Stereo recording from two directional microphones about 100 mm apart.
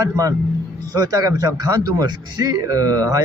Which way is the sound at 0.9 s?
35° right (ahead or behind).